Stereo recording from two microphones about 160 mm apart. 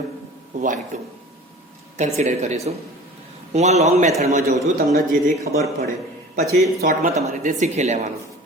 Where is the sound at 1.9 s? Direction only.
45° right (ahead or behind).